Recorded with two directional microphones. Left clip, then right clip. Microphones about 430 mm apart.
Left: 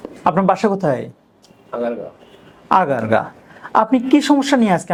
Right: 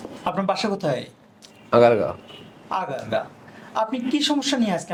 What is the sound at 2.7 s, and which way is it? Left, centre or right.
Speech, left.